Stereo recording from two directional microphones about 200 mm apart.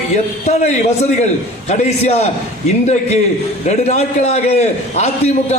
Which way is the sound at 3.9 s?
35° left (ahead or behind).